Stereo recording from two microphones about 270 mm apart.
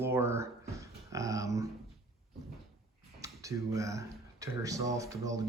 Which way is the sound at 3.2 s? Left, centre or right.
Centre.